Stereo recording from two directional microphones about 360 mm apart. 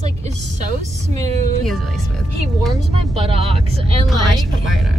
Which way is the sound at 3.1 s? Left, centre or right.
Centre.